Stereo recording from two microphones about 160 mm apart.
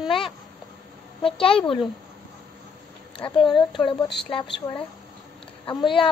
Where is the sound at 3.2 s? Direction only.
30° left (ahead or behind).